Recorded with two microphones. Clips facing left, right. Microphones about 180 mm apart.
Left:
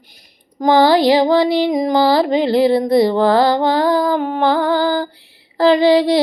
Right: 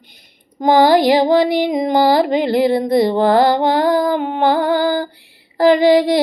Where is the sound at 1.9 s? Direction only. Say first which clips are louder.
Right 1 dB; 50° right (ahead or behind).